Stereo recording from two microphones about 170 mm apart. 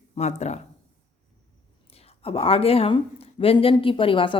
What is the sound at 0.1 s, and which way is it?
Speech, 40° left (ahead or behind).